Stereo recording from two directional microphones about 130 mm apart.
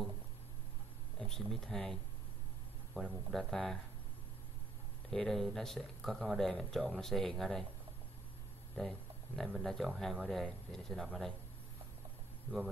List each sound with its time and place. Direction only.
1.2 s speech: 5° left (ahead or behind)
3.0 s speech: centre (ahead or behind)
5.1 s speech: 5° left (ahead or behind)
8.7 s a sound: 5° left (ahead or behind)
9.6 s speech: centre (ahead or behind)